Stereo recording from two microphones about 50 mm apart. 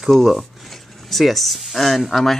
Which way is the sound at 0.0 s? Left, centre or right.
Centre.